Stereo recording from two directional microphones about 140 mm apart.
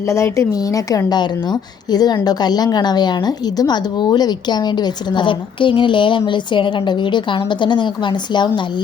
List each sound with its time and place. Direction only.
0.1 s a woman's voice: 20° left (ahead or behind)